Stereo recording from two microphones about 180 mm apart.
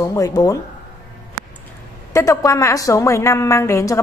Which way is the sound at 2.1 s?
20° left (ahead or behind).